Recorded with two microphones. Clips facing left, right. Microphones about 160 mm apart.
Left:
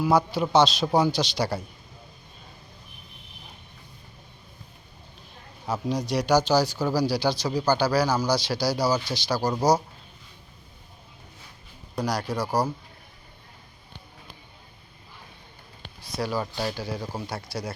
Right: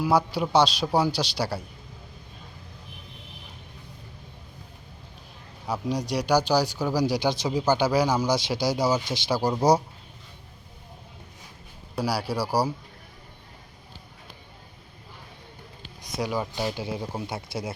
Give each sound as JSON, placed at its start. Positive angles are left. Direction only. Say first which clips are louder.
{"t": 0.0, "sound": "speech", "louder": "left 1 dB", "side_deg": -10}
{"t": 5.6, "sound": "speech", "louder": "left 1 dB", "side_deg": -10}
{"t": 11.9, "sound": "speech", "louder": "even", "side_deg": -10}
{"t": 16.0, "sound": "a sound", "louder": "even", "side_deg": -20}
{"t": 16.5, "sound": "speech", "louder": "right 1 dB", "side_deg": -20}